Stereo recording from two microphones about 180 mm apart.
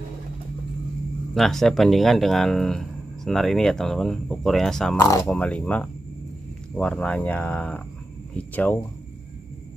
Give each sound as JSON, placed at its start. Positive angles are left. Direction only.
{"t": 1.3, "sound": "speech", "side_deg": 0}
{"t": 4.9, "sound": "speech", "side_deg": 15}
{"t": 5.2, "sound": "speech", "side_deg": 5}